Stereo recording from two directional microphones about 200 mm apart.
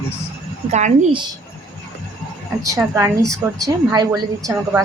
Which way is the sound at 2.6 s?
15° right (ahead or behind).